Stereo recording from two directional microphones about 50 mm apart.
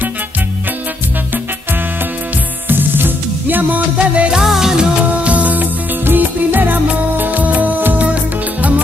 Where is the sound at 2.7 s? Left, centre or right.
Right.